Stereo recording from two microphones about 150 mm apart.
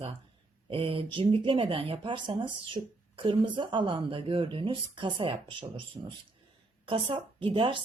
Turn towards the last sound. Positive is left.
turn(degrees=-35)  # may be behind; listen again after turning